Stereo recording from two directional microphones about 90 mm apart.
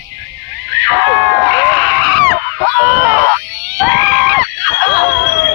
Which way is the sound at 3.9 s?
10° right (ahead or behind).